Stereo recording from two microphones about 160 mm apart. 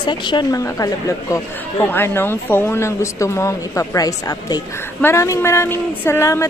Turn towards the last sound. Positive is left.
turn(degrees=20)  # may be behind; listen again after turning